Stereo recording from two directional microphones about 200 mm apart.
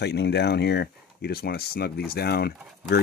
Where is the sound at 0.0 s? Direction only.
55° left (ahead or behind).